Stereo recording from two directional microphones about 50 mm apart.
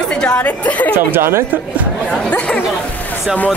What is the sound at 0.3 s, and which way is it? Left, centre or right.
Speech, left.